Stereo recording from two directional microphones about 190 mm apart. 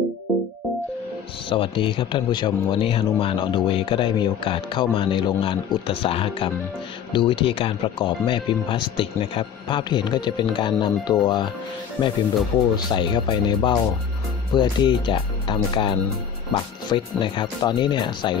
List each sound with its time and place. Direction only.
1.5 s speech: 25° left (ahead or behind)